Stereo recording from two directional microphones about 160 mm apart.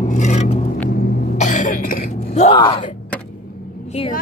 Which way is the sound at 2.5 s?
30° left (ahead or behind).